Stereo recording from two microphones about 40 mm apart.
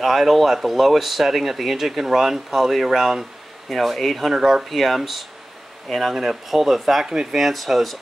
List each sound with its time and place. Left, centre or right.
0.0 s speech: centre
3.6 s speech: centre
7.1 s speech: centre
7.3 s speech: centre